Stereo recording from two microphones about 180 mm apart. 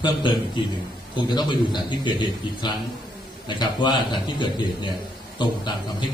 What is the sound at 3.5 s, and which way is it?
A man's voice, 25° left (ahead or behind).